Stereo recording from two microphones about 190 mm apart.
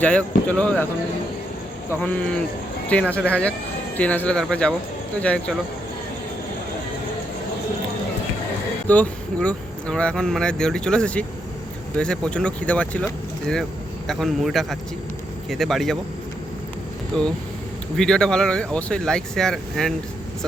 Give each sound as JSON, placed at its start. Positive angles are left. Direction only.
{"t": 0.0, "sound": "speech", "side_deg": 5}
{"t": 1.9, "sound": "speech", "side_deg": 5}
{"t": 8.9, "sound": "speech", "side_deg": 5}
{"t": 14.1, "sound": "speech", "side_deg": 0}
{"t": 17.1, "sound": "speech", "side_deg": 0}